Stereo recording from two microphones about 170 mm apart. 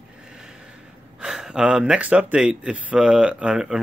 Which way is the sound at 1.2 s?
5° right (ahead or behind).